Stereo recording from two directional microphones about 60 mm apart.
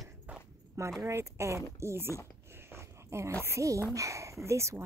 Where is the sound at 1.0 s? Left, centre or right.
Right.